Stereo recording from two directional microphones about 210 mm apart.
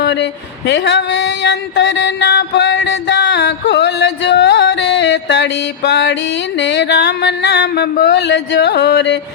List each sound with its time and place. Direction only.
0.0 s a sound: 55° left (ahead or behind)
0.7 s mantra: 55° left (ahead or behind)
6.6 s music: 55° left (ahead or behind)